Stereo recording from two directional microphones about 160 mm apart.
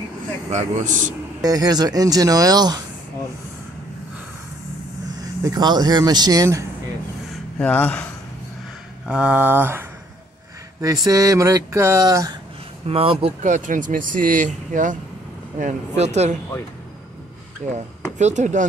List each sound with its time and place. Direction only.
0.5 s speech: 45° right (ahead or behind)
1.4 s speech: 25° right (ahead or behind)
5.4 s speech: 25° right (ahead or behind)
7.5 s speech: 10° left (ahead or behind)
9.0 s speech: 5° right (ahead or behind); by 12.3 s 20° right (ahead or behind)
12.8 s speech: 35° right (ahead or behind)
13.4 s speech: 50° right (ahead or behind)
17.6 s speech: 50° right (ahead or behind)